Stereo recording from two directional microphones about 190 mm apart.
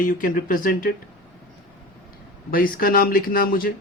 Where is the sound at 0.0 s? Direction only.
45° left (ahead or behind).